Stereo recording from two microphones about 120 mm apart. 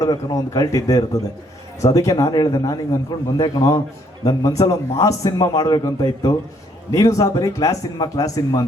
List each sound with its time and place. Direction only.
0.0 s a man's voice: 30° left (ahead or behind)